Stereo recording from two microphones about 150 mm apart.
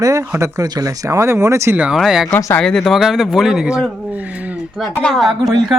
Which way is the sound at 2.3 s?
15° left (ahead or behind).